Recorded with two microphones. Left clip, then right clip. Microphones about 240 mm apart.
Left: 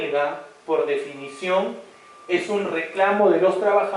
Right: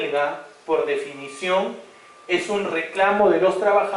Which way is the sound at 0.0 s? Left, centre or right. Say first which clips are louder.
Even; centre.